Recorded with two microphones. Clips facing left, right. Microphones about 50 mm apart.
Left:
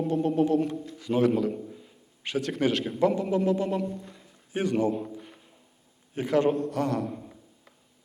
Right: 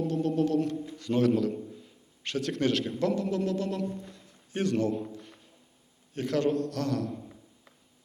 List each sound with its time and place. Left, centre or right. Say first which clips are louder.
0.1 s a man's voice: left 5 dB; centre
1.6 s a sound: left 1 dB; centre
3.0 s a man's voice: left 7 dB; centre
3.8 s a man's voice: left 2 dB; centre